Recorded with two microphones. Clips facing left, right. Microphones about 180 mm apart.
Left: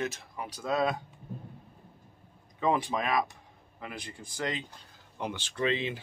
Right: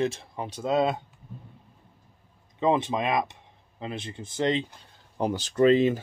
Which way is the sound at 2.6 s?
25° right (ahead or behind).